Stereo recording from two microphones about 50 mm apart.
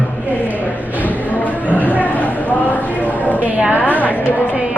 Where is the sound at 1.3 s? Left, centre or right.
Left.